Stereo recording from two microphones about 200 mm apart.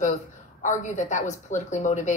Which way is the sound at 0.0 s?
35° left (ahead or behind).